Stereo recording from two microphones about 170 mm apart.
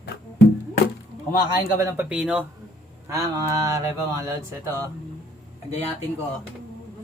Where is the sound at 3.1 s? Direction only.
20° right (ahead or behind).